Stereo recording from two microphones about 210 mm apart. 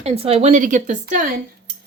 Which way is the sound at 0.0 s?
30° right (ahead or behind).